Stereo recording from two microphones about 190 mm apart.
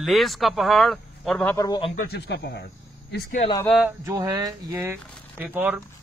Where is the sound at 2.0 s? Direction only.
60° left (ahead or behind).